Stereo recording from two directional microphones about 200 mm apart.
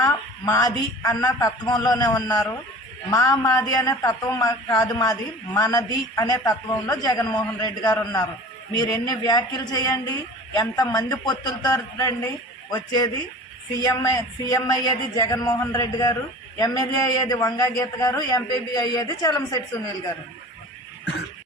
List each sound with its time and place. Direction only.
0.0 s a woman's voice: 15° left (ahead or behind)